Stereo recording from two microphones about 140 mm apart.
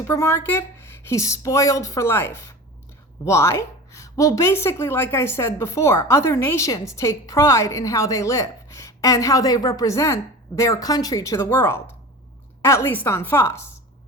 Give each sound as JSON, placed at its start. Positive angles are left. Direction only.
{"t": 0.0, "sound": "a woman's voice", "side_deg": 20}